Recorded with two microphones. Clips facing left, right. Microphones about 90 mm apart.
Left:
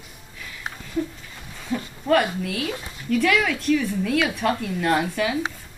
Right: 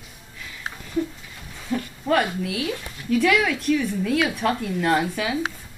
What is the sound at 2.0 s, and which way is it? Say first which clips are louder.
Speech: left 2 dB; centre (ahead or behind).